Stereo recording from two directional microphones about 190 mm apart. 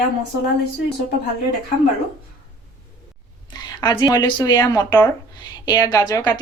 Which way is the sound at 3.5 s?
20° left (ahead or behind).